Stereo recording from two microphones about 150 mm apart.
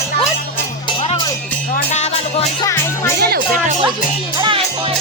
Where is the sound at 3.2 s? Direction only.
90° right.